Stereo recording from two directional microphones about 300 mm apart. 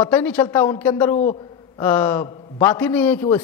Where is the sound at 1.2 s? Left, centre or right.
Left.